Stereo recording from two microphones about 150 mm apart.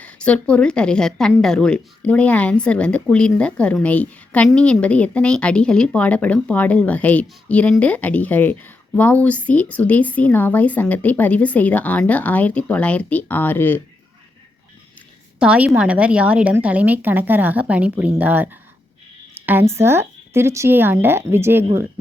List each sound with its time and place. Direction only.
0.0 s speech: 10° left (ahead or behind)
15.4 s a woman's voice: 10° right (ahead or behind)